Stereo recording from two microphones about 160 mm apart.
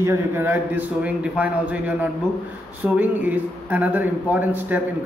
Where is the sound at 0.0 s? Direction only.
15° right (ahead or behind).